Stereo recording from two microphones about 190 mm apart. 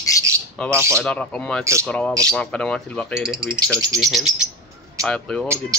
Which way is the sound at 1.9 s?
5° left (ahead or behind).